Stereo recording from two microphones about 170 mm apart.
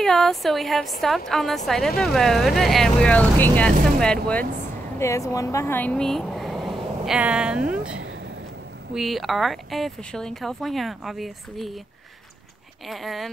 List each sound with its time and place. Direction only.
0.0 s speech: centre (ahead or behind)
4.9 s speech: 15° left (ahead or behind); by 11.7 s centre (ahead or behind)
12.8 s speech: centre (ahead or behind)